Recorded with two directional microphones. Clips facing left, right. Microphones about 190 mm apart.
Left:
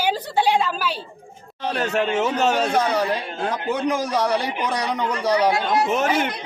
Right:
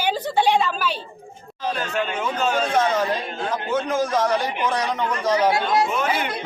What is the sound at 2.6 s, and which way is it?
Speech, 10° left (ahead or behind).